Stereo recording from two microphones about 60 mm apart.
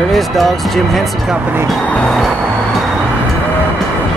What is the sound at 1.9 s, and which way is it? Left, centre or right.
Vehicle, centre.